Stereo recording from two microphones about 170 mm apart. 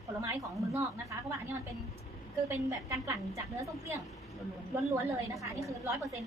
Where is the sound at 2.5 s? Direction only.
20° right (ahead or behind).